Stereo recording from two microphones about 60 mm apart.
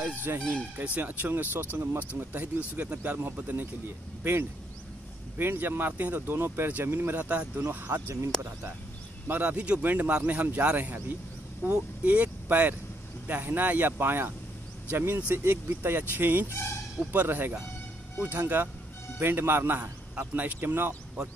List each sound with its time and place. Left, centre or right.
0.3 s speech: right
0.7 s speech: right
8.3 s speech: centre
9.3 s speech: right
16.4 s speech: left
17.1 s speech: right